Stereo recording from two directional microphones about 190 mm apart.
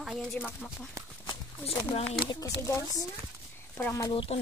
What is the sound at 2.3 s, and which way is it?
Speech, 15° left (ahead or behind).